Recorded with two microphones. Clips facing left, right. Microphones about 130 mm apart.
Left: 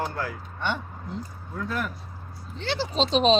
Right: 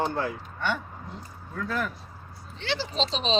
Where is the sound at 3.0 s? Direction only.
45° left (ahead or behind).